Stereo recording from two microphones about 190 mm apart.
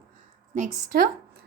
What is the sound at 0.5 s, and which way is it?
Speech, 40° right (ahead or behind).